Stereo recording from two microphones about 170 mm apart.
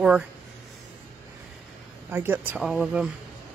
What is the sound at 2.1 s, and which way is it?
Speech, 15° right (ahead or behind).